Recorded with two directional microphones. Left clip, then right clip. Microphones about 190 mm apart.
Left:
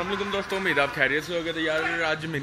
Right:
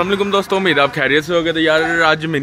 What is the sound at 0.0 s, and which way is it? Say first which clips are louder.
A man's voice: right 12 dB; 20° right (ahead or behind).